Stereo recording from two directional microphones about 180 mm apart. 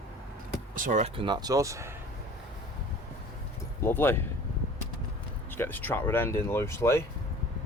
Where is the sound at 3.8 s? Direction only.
10° left (ahead or behind).